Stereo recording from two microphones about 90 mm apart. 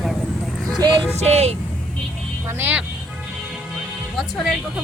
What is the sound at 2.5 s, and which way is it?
Speech, 20° right (ahead or behind).